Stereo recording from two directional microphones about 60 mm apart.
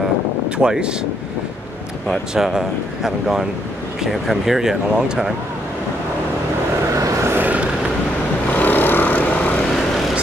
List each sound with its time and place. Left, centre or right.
0.6 s speech: centre
2.3 s speech: centre
7.3 s vehicle: right
8.5 s vehicle: left